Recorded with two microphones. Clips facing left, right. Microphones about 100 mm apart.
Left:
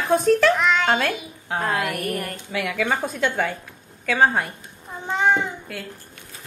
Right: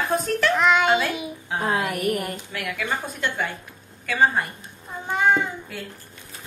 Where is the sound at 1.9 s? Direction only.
15° right (ahead or behind).